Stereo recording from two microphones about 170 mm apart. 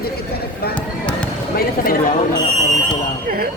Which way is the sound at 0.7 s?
5° left (ahead or behind).